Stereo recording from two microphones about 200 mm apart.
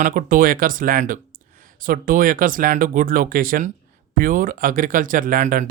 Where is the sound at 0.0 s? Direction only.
40° right (ahead or behind).